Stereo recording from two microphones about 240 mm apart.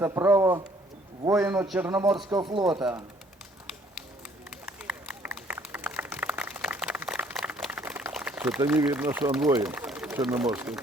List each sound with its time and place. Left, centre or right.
0.0 s a man's voice: centre
2.1 s speech: centre
4.6 s run: centre
9.6 s speech: centre